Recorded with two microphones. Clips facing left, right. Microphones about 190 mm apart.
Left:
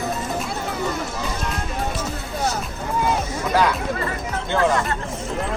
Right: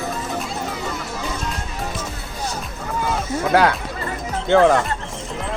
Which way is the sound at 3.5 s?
65° right (ahead or behind).